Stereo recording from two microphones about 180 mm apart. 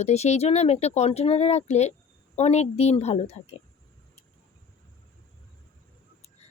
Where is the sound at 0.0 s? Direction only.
35° left (ahead or behind).